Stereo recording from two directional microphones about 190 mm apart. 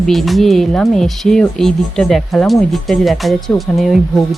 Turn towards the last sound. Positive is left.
turn(degrees=0)  # may be behind; listen again after turning